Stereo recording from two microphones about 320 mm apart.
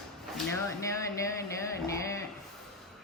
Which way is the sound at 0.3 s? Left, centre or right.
Centre.